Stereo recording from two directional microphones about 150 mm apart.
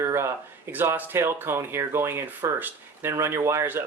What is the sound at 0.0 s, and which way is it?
Speech, 20° right (ahead or behind).